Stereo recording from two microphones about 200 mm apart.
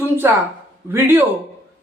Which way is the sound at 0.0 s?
10° right (ahead or behind).